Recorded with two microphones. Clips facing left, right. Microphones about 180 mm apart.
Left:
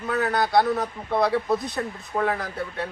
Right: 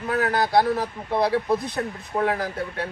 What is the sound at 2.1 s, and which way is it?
Speech, 10° right (ahead or behind).